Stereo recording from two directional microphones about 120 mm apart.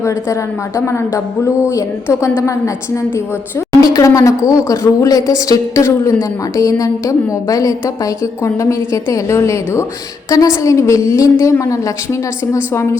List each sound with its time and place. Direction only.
3.8 s speech: 30° left (ahead or behind)